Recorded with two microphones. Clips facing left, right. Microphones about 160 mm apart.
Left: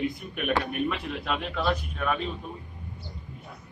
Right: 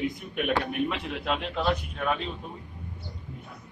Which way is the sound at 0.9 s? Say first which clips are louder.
Even; 20° right (ahead or behind).